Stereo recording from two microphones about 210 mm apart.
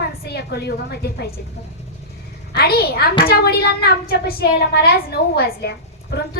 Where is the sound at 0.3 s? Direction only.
50° left (ahead or behind).